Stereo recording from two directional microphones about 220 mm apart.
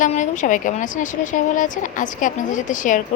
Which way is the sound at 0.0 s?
35° left (ahead or behind).